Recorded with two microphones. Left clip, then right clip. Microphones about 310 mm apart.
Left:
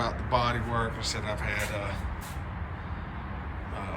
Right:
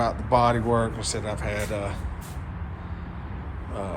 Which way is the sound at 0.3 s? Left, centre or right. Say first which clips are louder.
Right 8 dB; centre.